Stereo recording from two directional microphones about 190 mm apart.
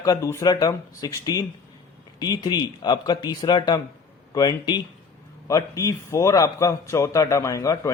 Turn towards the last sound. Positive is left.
turn(degrees=15)  # may be behind; listen again after turning